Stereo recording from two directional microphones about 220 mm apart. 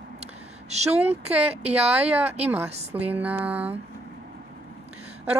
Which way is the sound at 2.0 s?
10° right (ahead or behind).